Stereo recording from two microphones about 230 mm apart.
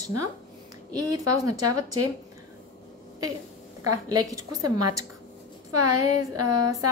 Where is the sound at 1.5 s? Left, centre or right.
Right.